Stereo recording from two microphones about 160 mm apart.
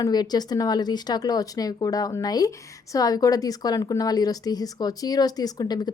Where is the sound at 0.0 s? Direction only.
25° left (ahead or behind).